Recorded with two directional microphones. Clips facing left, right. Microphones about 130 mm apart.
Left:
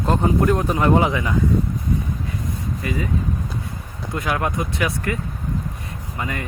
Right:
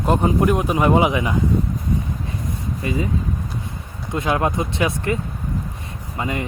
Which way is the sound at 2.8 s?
25° right (ahead or behind).